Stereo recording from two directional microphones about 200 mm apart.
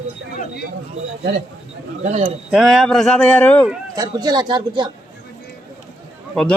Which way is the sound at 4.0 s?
20° right (ahead or behind).